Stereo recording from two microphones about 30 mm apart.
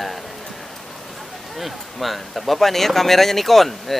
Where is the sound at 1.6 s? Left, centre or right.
Centre.